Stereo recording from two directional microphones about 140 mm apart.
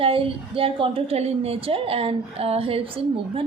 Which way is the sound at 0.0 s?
40° right (ahead or behind).